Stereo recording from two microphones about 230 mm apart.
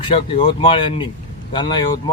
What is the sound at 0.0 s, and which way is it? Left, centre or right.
Speech, left.